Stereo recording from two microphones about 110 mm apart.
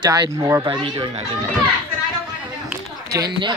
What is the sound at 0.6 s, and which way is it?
Speech, 45° right (ahead or behind).